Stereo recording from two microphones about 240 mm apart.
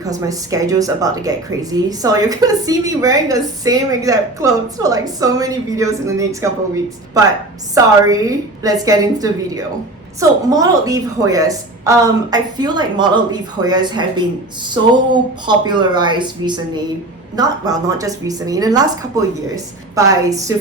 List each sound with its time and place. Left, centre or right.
0.0 s a woman's voice: centre
8.0 s a woman's voice: centre